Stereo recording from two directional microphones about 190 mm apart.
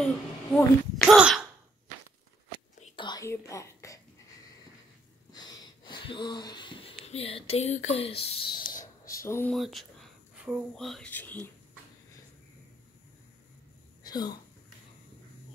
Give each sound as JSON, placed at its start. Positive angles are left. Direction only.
{"t": 0.0, "sound": "speech", "side_deg": 5}
{"t": 1.0, "sound": "sneeze", "side_deg": -5}
{"t": 3.0, "sound": "throat clearing", "side_deg": 20}
{"t": 5.3, "sound": "a sound", "side_deg": 20}
{"t": 9.5, "sound": "speech", "side_deg": 0}
{"t": 14.0, "sound": "a sound", "side_deg": 20}